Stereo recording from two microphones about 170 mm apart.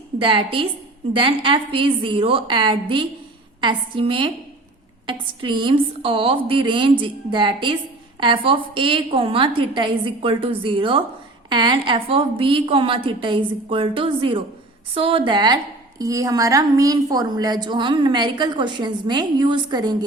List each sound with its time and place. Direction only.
0.2 s a woman's voice: 30° right (ahead or behind)